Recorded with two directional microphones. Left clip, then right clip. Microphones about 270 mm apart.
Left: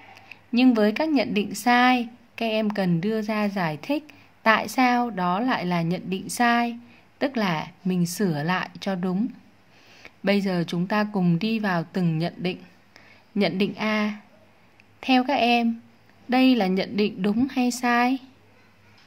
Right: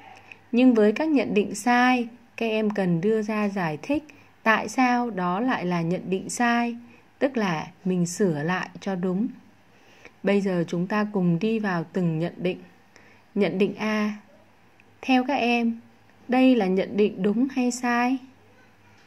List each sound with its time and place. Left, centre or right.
0.5 s speech: centre
4.1 s a sound: centre
4.7 s speech: centre